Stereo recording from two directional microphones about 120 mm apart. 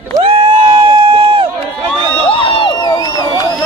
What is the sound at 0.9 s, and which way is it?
Run, 50° right (ahead or behind).